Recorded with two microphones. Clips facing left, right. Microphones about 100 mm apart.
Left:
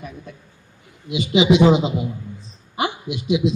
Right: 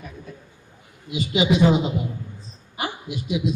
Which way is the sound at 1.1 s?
90° left.